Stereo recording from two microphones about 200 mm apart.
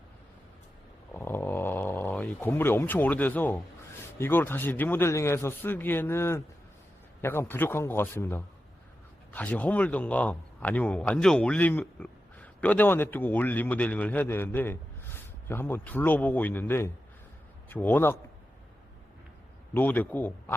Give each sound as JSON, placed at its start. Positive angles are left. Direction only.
{"t": 1.1, "sound": "a sound", "side_deg": 10}
{"t": 4.2, "sound": "a man's voice", "side_deg": 10}
{"t": 19.7, "sound": "a man's voice", "side_deg": 10}